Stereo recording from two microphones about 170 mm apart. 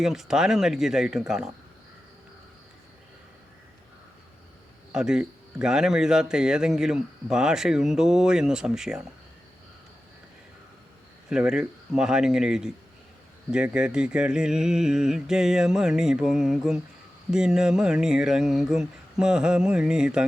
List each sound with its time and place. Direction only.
0.0 s speech: centre (ahead or behind)
4.9 s speech: 5° right (ahead or behind)
11.3 s speech: 5° right (ahead or behind)